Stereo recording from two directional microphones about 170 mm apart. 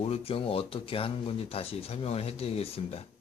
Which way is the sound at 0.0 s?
35° left (ahead or behind).